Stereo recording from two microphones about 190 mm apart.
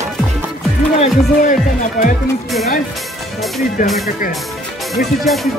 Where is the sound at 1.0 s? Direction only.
40° left (ahead or behind).